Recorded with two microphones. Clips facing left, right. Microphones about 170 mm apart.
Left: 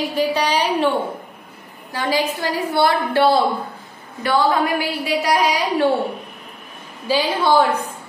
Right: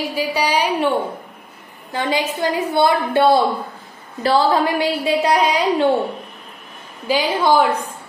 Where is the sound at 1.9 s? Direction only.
25° right (ahead or behind).